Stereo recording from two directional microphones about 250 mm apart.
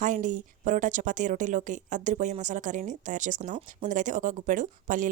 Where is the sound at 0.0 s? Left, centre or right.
Right.